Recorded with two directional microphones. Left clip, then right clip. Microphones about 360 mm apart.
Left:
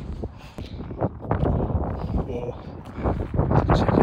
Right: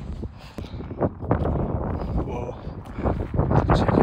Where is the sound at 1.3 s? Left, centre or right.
Centre.